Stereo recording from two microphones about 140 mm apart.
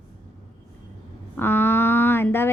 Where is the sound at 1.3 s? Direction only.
15° left (ahead or behind).